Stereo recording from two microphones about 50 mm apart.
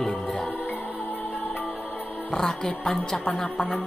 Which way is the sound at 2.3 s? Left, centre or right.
Centre.